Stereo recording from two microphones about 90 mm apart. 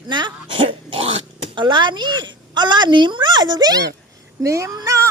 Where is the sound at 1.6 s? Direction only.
60° right (ahead or behind).